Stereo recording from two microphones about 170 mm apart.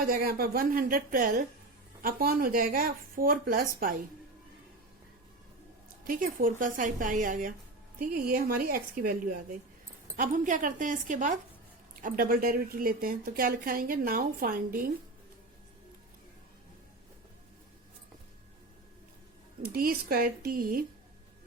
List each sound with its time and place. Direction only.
0.0 s a woman's voice: 60° right (ahead or behind)
6.1 s a woman's voice: 50° right (ahead or behind)
19.6 s a woman's voice: 60° right (ahead or behind)